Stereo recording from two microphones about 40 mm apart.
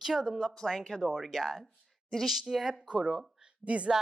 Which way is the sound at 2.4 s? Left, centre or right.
Centre.